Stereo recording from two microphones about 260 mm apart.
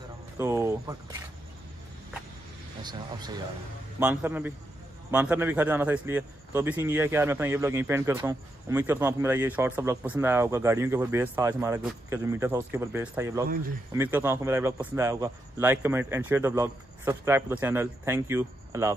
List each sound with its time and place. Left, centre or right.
0.4 s speech: centre
2.8 s a man's voice: centre